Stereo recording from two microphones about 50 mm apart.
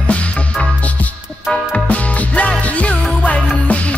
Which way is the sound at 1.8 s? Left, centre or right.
Left.